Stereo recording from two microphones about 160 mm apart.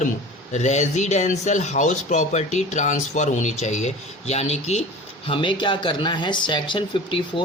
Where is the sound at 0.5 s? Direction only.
45° left (ahead or behind).